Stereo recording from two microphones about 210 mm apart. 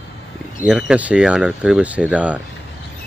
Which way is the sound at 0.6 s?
5° right (ahead or behind).